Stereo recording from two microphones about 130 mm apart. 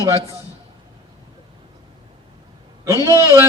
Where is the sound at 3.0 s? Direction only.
25° right (ahead or behind).